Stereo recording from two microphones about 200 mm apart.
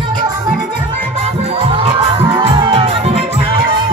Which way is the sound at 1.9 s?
25° right (ahead or behind).